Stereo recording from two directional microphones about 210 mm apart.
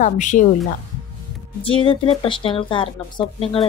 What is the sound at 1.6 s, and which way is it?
Speech, 25° left (ahead or behind).